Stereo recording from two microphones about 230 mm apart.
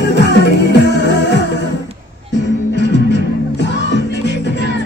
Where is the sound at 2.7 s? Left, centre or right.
Left.